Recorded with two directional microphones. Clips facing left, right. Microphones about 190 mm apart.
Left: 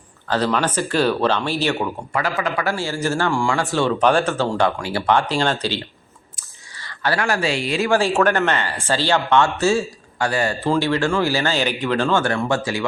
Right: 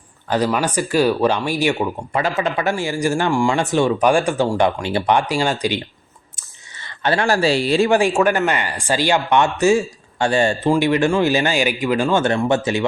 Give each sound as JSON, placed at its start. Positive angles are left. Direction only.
{"t": 0.3, "sound": "speech", "side_deg": -10}
{"t": 6.3, "sound": "a sound", "side_deg": -20}
{"t": 7.9, "sound": "speech", "side_deg": -15}
{"t": 10.2, "sound": "speech", "side_deg": -25}
{"t": 10.7, "sound": "speech", "side_deg": -15}
{"t": 12.2, "sound": "speech", "side_deg": -20}